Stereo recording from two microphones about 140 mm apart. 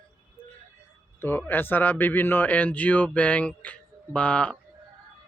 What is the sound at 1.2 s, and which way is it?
Speech, 15° left (ahead or behind).